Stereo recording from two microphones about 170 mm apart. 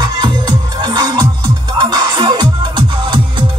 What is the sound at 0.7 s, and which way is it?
Music, 25° right (ahead or behind).